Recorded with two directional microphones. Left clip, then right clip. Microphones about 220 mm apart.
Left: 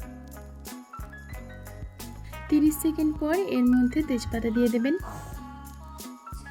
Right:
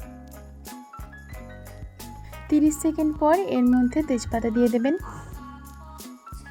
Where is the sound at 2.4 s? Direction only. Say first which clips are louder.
Right 2 dB; 10° right (ahead or behind).